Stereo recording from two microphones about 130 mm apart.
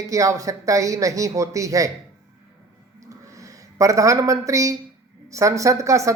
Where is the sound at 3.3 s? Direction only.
25° right (ahead or behind).